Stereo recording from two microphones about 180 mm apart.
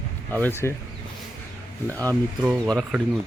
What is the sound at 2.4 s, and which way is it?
Speech, centre (ahead or behind).